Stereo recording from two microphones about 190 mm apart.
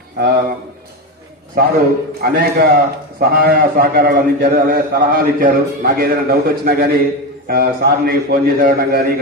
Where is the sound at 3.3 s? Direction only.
55° right (ahead or behind).